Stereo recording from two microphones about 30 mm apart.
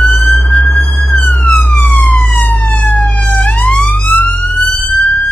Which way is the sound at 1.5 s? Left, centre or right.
Left.